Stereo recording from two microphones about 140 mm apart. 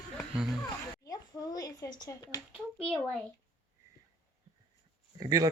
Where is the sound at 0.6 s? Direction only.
25° left (ahead or behind).